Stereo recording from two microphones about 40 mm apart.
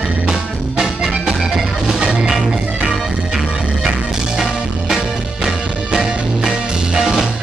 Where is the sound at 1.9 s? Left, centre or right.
Centre.